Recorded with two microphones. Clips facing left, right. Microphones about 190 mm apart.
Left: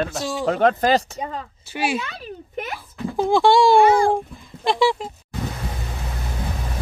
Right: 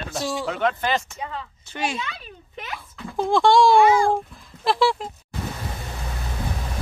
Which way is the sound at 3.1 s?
Centre (ahead or behind).